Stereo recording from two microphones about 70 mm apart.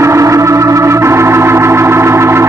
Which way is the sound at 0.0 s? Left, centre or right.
Right.